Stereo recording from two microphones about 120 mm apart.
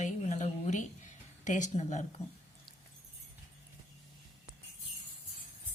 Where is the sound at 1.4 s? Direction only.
90° left; by 2.0 s 75° left (ahead or behind).